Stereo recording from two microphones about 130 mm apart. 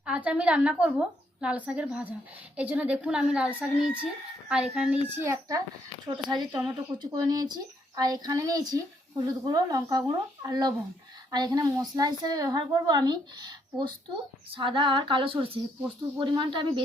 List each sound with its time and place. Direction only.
0.0 s speech: 10° right (ahead or behind)
6.1 s speech: 30° right (ahead or behind)
14.5 s female singing: 40° right (ahead or behind)
16.1 s speech: 40° right (ahead or behind)